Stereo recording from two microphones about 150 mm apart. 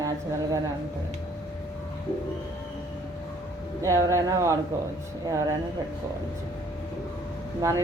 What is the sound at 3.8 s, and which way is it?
Speech, 20° right (ahead or behind).